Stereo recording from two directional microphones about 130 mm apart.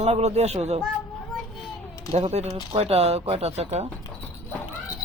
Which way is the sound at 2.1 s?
55° right (ahead or behind).